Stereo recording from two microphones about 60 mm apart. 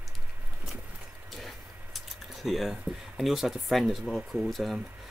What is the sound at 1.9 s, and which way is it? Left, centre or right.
Speech, centre.